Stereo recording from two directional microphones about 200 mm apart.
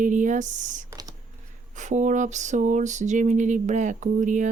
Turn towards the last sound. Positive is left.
turn(degrees=-40)  # may be behind; listen again after turning